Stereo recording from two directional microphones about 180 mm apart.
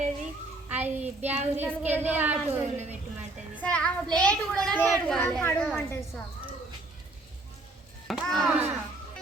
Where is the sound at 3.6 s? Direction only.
5° left (ahead or behind).